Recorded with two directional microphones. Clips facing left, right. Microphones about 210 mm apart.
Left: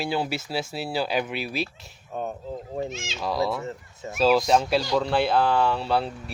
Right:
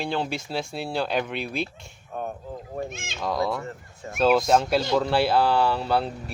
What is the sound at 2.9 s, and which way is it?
Speech, 55° right (ahead or behind).